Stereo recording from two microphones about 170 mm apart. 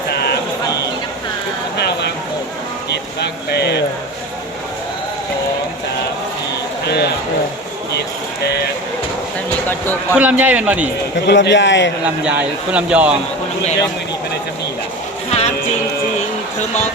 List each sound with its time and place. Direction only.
0.1 s a sound: 70° left (ahead or behind)
1.8 s a sound: 75° left (ahead or behind)
6.8 s speech: 75° left (ahead or behind)
8.4 s vehicle: 75° left (ahead or behind)
9.6 s speech: 10° left (ahead or behind)
10.2 s speech: 10° right (ahead or behind)
11.3 s a man's voice: 90° left
12.2 s speech: 10° right (ahead or behind)
15.3 s music: 40° left (ahead or behind)